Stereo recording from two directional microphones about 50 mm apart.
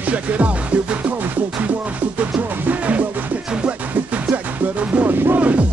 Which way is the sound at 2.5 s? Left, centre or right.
Right.